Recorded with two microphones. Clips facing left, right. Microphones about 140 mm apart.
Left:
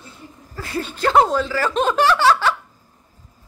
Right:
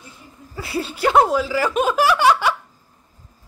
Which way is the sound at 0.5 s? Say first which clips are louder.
Right 1 dB; 10° right (ahead or behind).